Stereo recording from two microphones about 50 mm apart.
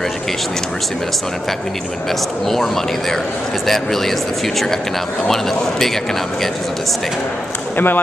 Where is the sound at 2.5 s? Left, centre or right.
Centre.